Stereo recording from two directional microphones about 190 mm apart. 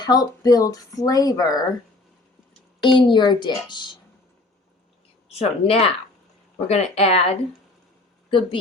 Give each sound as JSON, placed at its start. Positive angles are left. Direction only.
{"t": 0.0, "sound": "speech", "side_deg": 20}
{"t": 2.8, "sound": "speech", "side_deg": 25}
{"t": 5.3, "sound": "a woman's voice", "side_deg": 30}